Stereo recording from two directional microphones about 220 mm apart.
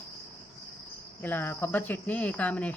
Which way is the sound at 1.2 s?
10° left (ahead or behind).